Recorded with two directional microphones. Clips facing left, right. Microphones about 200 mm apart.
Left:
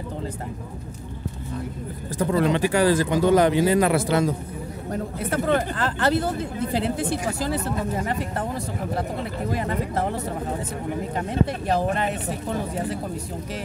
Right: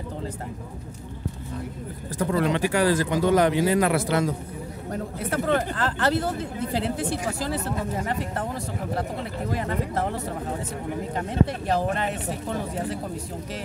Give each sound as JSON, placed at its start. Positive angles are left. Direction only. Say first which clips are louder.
{"t": 2.1, "sound": "speech", "louder": "left 2 dB", "side_deg": 25}
{"t": 5.3, "sound": "speech", "louder": "left 1 dB", "side_deg": 15}
{"t": 9.5, "sound": "speech", "louder": "left 1 dB", "side_deg": 15}
{"t": 11.1, "sound": "speech", "louder": "right 1 dB", "side_deg": 15}